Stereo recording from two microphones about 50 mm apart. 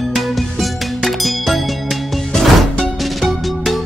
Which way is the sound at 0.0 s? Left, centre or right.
Centre.